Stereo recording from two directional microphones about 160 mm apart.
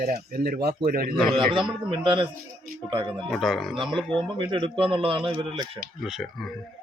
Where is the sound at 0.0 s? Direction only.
70° right (ahead or behind).